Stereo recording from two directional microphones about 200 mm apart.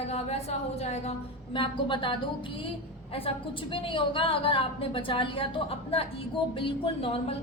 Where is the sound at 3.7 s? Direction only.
25° left (ahead or behind).